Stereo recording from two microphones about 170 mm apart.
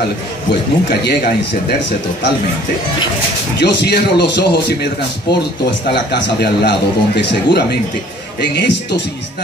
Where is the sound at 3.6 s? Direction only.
80° left.